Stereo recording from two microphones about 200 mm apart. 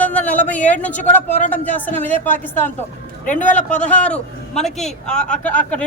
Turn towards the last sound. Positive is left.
turn(degrees=5)  # may be behind; listen again after turning